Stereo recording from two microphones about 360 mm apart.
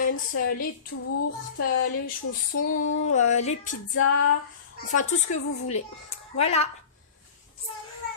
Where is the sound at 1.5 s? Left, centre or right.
Left.